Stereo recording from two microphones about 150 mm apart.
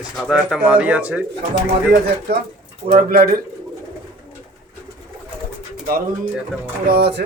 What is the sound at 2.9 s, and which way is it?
Speech, 90° right.